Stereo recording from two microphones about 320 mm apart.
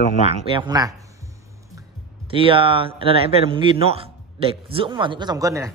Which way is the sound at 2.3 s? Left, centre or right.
Centre.